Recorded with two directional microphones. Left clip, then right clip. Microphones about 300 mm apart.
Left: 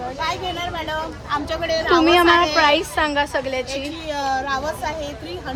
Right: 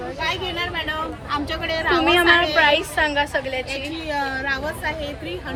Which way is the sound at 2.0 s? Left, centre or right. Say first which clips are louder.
Left 1 dB; left.